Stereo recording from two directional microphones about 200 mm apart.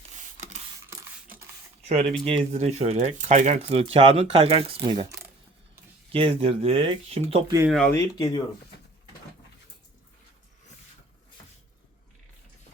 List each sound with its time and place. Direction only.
1.9 s speech: 30° right (ahead or behind)
7.7 s speech: 5° left (ahead or behind)
7.9 s speech: 20° left (ahead or behind)